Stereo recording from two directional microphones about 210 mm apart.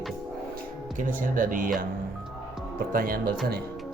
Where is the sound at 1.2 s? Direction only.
40° right (ahead or behind).